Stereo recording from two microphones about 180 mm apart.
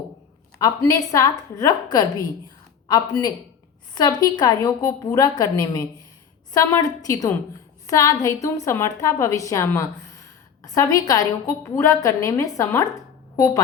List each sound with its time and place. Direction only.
0.6 s a woman's voice: 20° left (ahead or behind)